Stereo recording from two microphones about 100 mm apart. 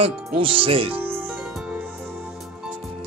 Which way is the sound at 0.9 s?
20° right (ahead or behind).